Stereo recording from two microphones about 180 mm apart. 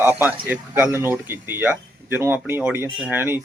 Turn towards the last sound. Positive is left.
turn(degrees=-10)  # may be behind; listen again after turning